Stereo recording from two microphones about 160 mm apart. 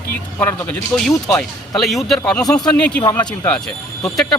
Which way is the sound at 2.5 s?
25° left (ahead or behind).